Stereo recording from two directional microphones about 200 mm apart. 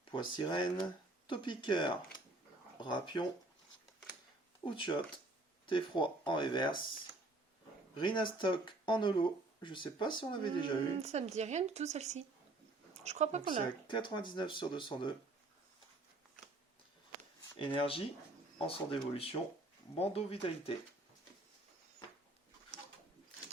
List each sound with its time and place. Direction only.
0.0 s speech: 25° left (ahead or behind)
4.6 s speech: 25° left (ahead or behind)
7.9 s speech: 25° left (ahead or behind)
11.0 s speech: 35° right (ahead or behind)
13.8 s speech: 25° left (ahead or behind)
17.6 s speech: 25° left (ahead or behind)
20.0 s speech: 30° left (ahead or behind)